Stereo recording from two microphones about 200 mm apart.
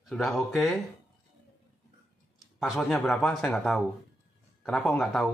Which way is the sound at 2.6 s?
Centre (ahead or behind).